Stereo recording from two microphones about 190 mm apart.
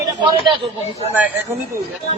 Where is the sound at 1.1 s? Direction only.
10° right (ahead or behind).